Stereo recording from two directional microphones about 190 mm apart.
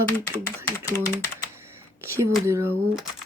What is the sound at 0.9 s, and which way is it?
Speech, 15° left (ahead or behind).